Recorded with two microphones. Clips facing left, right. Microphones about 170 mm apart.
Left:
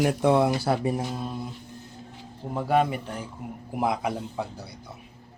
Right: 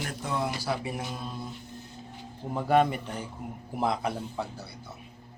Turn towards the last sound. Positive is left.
turn(degrees=15)  # may be behind; listen again after turning